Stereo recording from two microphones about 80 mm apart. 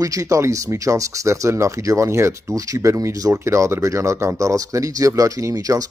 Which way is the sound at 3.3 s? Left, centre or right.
Right.